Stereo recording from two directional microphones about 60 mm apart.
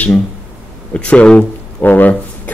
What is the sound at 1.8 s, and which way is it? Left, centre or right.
Speech, left.